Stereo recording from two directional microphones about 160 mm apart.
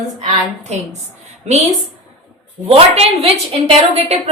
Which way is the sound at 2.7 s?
40° right (ahead or behind).